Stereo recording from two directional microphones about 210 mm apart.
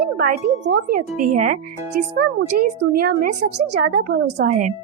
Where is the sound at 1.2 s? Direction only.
40° right (ahead or behind).